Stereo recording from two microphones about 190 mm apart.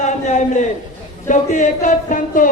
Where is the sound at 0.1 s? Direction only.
40° left (ahead or behind).